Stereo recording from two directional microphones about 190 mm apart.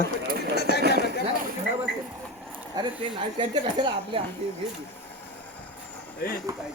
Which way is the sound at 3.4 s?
25° right (ahead or behind).